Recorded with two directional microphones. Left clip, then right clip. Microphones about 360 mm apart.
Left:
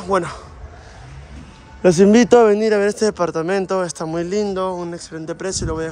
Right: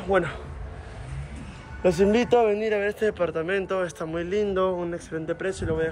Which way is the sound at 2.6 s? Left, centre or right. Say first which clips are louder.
Left 8 dB; left.